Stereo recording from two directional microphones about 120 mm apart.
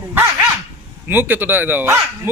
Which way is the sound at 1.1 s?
15° right (ahead or behind).